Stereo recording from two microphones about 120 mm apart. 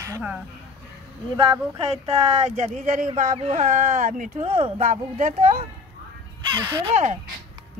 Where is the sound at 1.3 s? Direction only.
45° right (ahead or behind).